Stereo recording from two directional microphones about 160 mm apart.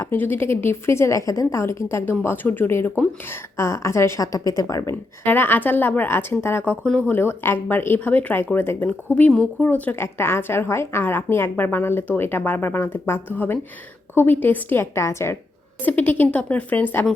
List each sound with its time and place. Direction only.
0.0 s speech: 15° left (ahead or behind)